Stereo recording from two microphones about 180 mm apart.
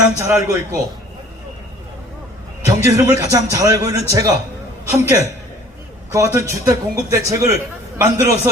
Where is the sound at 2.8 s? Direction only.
15° right (ahead or behind).